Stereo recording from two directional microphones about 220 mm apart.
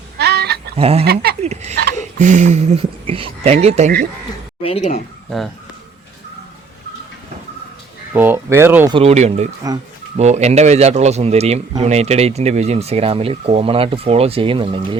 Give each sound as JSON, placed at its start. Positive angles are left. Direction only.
{"t": 0.2, "sound": "goat", "side_deg": -50}
{"t": 0.8, "sound": "speech", "side_deg": -25}
{"t": 1.0, "sound": "speech", "side_deg": -45}
{"t": 2.0, "sound": "speech", "side_deg": -35}
{"t": 4.6, "sound": "speech", "side_deg": 25}
{"t": 8.1, "sound": "speech", "side_deg": -10}
{"t": 9.0, "sound": "speech", "side_deg": -30}